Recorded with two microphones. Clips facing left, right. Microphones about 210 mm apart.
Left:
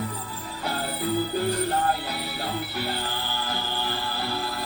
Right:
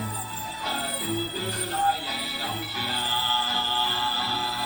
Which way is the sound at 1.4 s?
55° left (ahead or behind).